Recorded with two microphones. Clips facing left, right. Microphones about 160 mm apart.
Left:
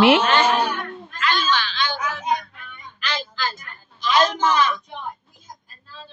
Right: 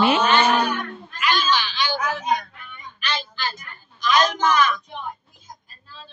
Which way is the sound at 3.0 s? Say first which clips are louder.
Left 1 dB; 90° left.